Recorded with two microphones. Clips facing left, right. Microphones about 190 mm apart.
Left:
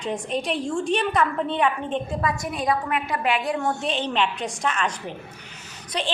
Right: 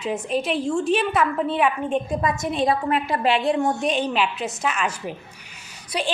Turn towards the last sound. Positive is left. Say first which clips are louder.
# right 2 dB
turn(degrees=-10)  # may be behind; listen again after turning